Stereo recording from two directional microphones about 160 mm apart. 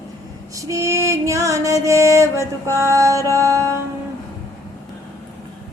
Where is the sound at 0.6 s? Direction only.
20° right (ahead or behind).